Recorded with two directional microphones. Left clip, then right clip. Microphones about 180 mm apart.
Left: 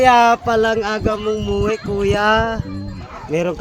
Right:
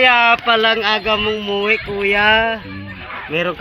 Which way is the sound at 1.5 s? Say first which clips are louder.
Right 2 dB; 90° left.